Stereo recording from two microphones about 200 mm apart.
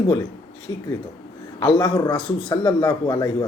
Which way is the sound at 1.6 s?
20° left (ahead or behind).